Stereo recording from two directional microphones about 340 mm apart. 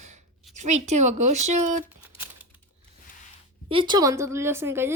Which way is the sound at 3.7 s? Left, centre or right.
Centre.